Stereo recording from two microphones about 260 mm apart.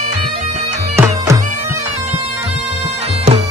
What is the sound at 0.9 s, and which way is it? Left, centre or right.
Music, centre.